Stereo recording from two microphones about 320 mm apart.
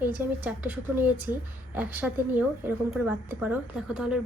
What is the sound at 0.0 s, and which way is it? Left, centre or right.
Speech, centre.